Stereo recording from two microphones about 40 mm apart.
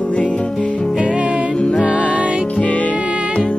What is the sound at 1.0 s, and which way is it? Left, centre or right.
Music, right.